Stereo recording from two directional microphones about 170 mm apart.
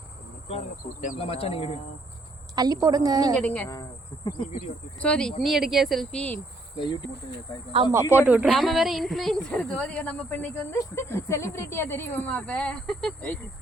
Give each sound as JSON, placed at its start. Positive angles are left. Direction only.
{"t": 1.2, "sound": "speech", "side_deg": 35}
{"t": 2.6, "sound": "a woman's voice", "side_deg": -20}
{"t": 3.3, "sound": "speech", "side_deg": 10}
{"t": 4.9, "sound": "speech", "side_deg": 5}
{"t": 6.7, "sound": "speech", "side_deg": 25}
{"t": 7.9, "sound": "speech", "side_deg": -15}